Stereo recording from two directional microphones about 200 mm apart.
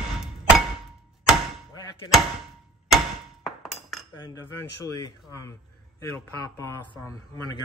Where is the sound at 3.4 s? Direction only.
Centre (ahead or behind).